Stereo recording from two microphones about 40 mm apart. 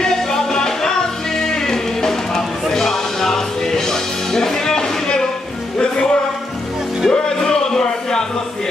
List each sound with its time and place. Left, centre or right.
0.0 s music: centre
7.1 s music: centre